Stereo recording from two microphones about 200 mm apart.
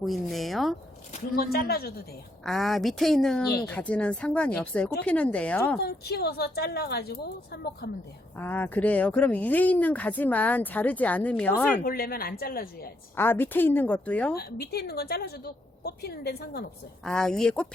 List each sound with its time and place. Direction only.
0.0 s a woman's voice: centre (ahead or behind)
1.2 s a woman's voice: 50° left (ahead or behind)
2.4 s a woman's voice: centre (ahead or behind)
5.8 s a woman's voice: 50° left (ahead or behind)
8.4 s speech: 10° left (ahead or behind)
11.8 s a woman's voice: 50° left (ahead or behind)
13.1 s speech: 10° left (ahead or behind)
14.3 s a woman's voice: 50° left (ahead or behind)
17.1 s a woman's voice: 5° left (ahead or behind)